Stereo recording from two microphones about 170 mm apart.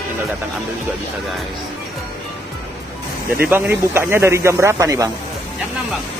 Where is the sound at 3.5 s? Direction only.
15° right (ahead or behind).